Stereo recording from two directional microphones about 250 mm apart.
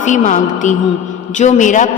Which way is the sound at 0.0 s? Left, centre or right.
Left.